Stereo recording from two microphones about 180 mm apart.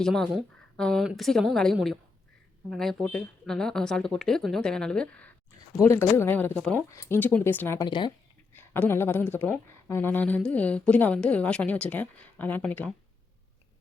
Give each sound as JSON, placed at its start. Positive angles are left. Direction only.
{"t": 0.0, "sound": "speech", "side_deg": 0}
{"t": 7.9, "sound": "speech", "side_deg": 25}
{"t": 8.5, "sound": "speech", "side_deg": 10}